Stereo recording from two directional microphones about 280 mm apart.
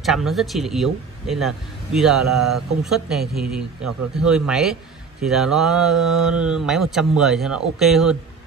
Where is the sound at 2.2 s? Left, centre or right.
Right.